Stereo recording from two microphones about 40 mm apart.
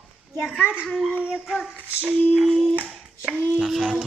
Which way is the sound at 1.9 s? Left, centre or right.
Right.